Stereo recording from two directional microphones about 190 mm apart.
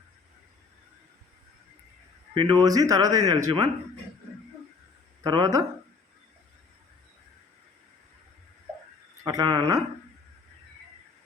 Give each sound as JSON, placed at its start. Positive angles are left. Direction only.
{"t": 2.3, "sound": "speech", "side_deg": -25}
{"t": 5.2, "sound": "speech", "side_deg": -20}
{"t": 9.2, "sound": "speech", "side_deg": -20}